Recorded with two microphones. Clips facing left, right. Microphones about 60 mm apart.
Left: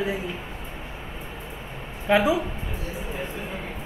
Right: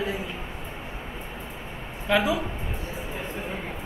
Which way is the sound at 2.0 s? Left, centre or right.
Left.